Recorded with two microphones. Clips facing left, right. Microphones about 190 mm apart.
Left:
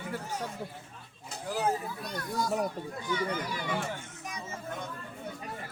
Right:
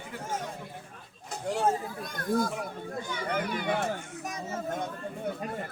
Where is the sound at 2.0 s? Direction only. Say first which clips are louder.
Right 5 dB; 50° right (ahead or behind).